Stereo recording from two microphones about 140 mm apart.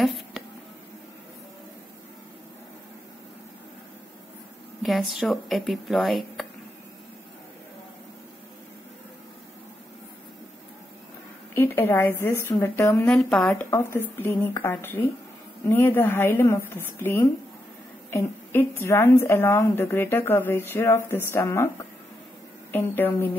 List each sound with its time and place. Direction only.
4.8 s speech: centre (ahead or behind)
11.5 s a woman's voice: 15° left (ahead or behind)
13.0 s a woman's voice: 5° left (ahead or behind)